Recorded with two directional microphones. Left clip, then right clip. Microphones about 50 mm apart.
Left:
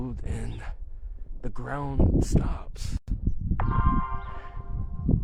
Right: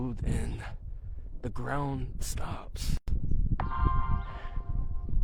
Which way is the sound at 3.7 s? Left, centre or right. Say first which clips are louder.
Left 5 dB; centre.